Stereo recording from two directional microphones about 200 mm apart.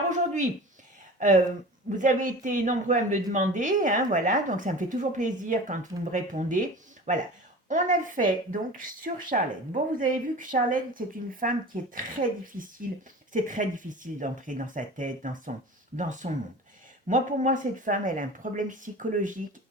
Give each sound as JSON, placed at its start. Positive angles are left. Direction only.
{"t": 1.2, "sound": "speech", "side_deg": -40}